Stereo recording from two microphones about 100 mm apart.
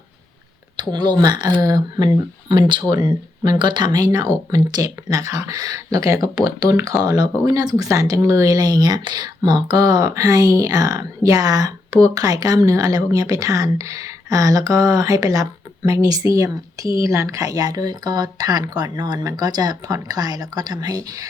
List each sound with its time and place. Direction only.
0.8 s speech: 45° right (ahead or behind)
2.5 s speech: 50° right (ahead or behind); by 21.2 s 35° right (ahead or behind)